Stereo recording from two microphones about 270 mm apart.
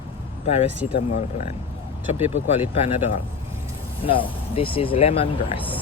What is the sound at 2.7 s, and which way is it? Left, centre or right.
Speech, left.